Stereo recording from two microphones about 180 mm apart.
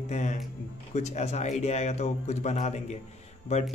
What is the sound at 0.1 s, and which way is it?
Speech, 40° left (ahead or behind).